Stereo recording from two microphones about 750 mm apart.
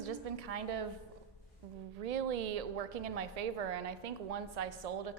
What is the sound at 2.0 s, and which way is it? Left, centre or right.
A woman's voice, right.